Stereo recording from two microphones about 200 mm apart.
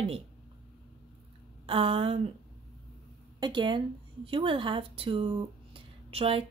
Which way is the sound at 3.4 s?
25° right (ahead or behind).